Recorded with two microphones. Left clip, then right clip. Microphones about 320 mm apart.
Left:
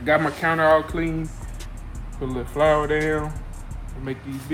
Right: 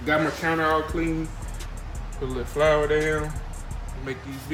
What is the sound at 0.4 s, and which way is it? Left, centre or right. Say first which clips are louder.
Speech: left 8 dB; left.